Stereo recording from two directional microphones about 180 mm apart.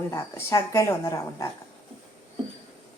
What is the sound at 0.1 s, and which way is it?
A woman's voice, 15° left (ahead or behind).